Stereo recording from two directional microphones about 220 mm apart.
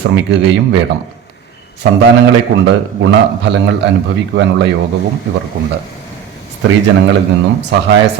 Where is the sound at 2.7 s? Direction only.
55° right (ahead or behind).